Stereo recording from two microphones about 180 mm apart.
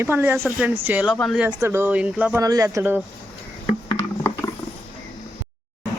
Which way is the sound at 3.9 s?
15° left (ahead or behind).